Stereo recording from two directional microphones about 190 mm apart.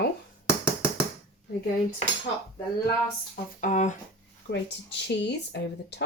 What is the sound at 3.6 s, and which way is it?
Speech, 40° left (ahead or behind).